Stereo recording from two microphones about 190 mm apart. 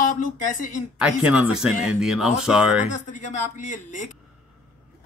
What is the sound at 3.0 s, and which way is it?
Speech, 40° left (ahead or behind).